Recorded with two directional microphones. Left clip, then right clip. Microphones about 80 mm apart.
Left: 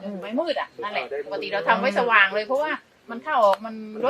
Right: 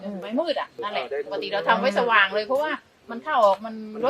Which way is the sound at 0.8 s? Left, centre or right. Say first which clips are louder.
Even; centre.